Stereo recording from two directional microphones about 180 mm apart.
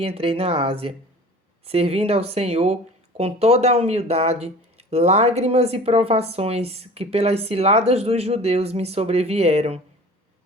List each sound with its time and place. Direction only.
0.0 s speech: 30° right (ahead or behind)